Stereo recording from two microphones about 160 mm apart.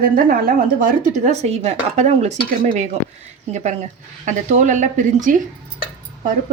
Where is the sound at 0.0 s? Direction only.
65° right (ahead or behind).